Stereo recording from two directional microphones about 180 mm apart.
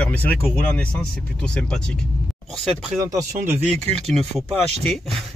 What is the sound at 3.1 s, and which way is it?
Speech, 15° right (ahead or behind).